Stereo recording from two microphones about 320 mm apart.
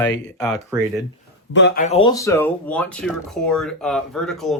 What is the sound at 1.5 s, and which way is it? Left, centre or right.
Speech, left.